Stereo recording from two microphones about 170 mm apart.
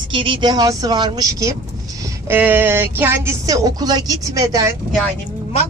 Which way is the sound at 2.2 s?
10° right (ahead or behind).